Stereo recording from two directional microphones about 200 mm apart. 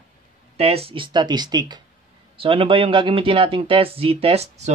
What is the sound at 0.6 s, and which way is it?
Speech, 30° right (ahead or behind).